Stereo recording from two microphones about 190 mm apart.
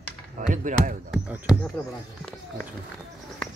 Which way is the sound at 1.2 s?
5° right (ahead or behind).